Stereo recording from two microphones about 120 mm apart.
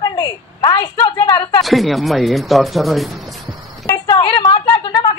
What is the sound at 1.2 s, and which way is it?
Speech, 40° left (ahead or behind).